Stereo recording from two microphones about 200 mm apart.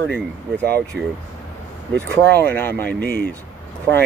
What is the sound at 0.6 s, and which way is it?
Speech, 55° right (ahead or behind).